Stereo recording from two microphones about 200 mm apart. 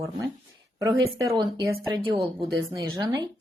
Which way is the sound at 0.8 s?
15° right (ahead or behind).